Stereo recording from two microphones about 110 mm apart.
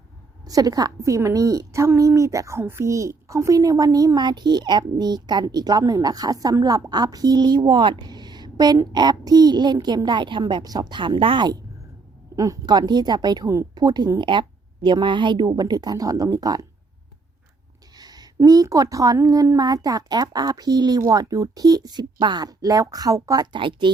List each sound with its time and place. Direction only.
0.4 s a woman's voice: 35° right (ahead or behind)
12.4 s a woman's voice: 35° right (ahead or behind)
17.9 s a woman's voice: 35° right (ahead or behind)
23.5 s speech: 50° right (ahead or behind)